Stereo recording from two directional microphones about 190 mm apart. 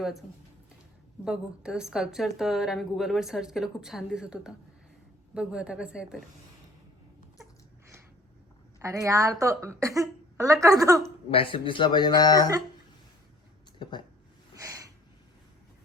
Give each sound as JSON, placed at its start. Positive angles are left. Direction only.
{"t": 1.2, "sound": "a woman's voice", "side_deg": -5}
{"t": 8.8, "sound": "a woman's voice", "side_deg": -15}
{"t": 11.3, "sound": "speech", "side_deg": 30}
{"t": 14.5, "sound": "a sound", "side_deg": -15}